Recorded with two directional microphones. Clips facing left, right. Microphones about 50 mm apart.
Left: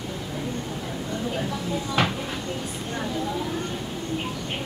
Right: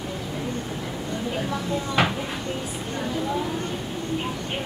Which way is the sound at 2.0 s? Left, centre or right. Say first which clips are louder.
Right 2 dB; centre.